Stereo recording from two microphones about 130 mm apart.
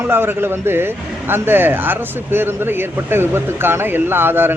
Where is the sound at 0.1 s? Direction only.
15° right (ahead or behind).